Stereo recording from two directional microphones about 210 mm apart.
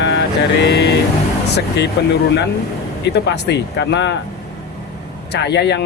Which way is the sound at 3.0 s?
55° left (ahead or behind).